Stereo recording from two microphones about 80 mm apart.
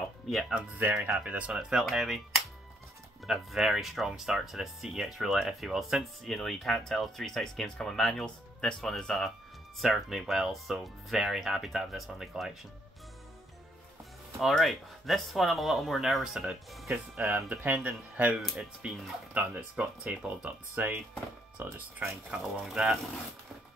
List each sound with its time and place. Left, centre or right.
0.3 s speech: centre
0.7 s speech: right
1.2 s speech: centre
14.4 s speech: centre
16.9 s speech: right
17.5 s speech: centre
22.4 s speech: centre